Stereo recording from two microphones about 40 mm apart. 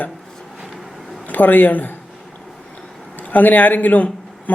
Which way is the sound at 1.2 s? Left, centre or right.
Left.